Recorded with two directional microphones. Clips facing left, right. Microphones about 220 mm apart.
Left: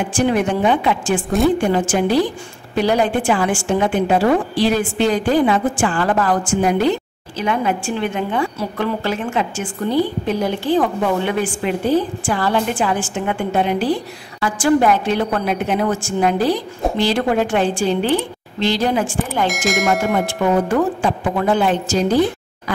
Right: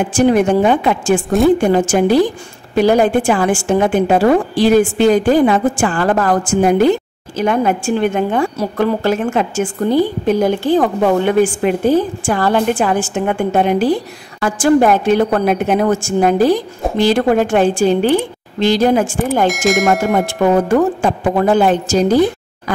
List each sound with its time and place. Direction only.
0.1 s a woman's voice: 45° right (ahead or behind)
19.4 s speech: centre (ahead or behind)
20.6 s a woman's voice: 45° right (ahead or behind)